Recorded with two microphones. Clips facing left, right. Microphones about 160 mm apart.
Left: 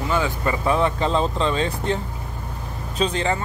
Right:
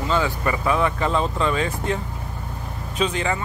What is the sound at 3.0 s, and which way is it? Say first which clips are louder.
Speech: left 1 dB; 30° left (ahead or behind).